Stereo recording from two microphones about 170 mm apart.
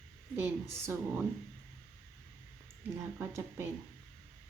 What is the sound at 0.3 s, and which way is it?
Speech, 15° right (ahead or behind).